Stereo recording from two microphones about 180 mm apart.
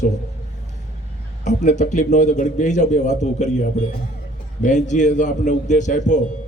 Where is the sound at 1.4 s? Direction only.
40° left (ahead or behind).